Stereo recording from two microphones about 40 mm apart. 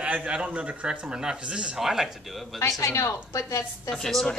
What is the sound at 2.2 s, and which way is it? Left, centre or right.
Speech, centre.